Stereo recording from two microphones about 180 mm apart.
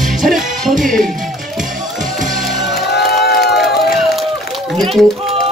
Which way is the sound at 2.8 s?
65° left (ahead or behind).